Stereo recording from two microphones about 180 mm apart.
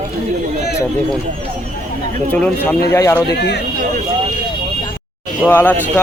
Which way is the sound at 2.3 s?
10° left (ahead or behind).